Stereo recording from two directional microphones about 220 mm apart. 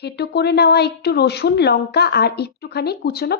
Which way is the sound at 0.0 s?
50° left (ahead or behind).